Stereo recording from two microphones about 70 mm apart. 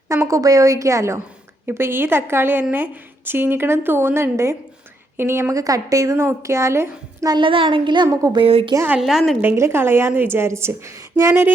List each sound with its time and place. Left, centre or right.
0.3 s a woman's voice: right
1.6 s a woman's voice: right
5.5 s a woman's voice: right
6.1 s a woman's voice: right
7.9 s speech: right
9.0 s a woman's voice: centre
9.6 s a woman's voice: right